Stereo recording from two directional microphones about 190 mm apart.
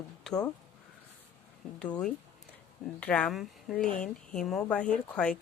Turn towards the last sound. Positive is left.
turn(degrees=5)  # may be behind; listen again after turning